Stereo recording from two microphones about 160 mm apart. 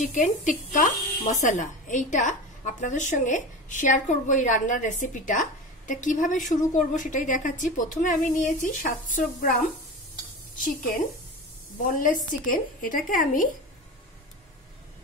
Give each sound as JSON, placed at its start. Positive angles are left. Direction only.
{"t": 0.0, "sound": "speech", "side_deg": 50}
{"t": 11.9, "sound": "a woman's voice", "side_deg": 55}